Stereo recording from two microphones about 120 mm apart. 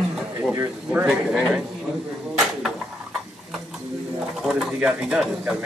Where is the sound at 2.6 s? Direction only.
Centre (ahead or behind).